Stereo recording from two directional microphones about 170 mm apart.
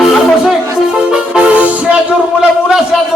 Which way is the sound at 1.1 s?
5° right (ahead or behind).